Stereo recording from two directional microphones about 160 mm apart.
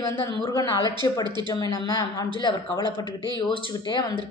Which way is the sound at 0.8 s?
25° right (ahead or behind).